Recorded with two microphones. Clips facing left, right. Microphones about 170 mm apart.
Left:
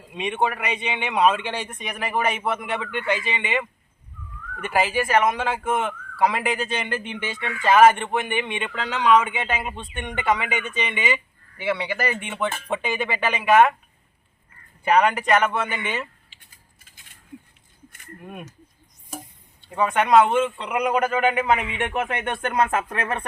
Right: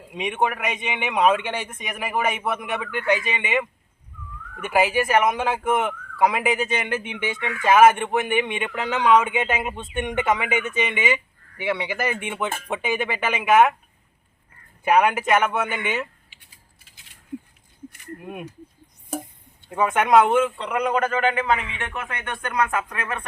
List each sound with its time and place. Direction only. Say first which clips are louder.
0.1 s speech: even; 10° right (ahead or behind)
14.8 s speech: even; 10° right (ahead or behind)
19.7 s speech: even; 10° right (ahead or behind)
20.6 s a man's voice: even; 10° left (ahead or behind); by 23.2 s 30° left (ahead or behind)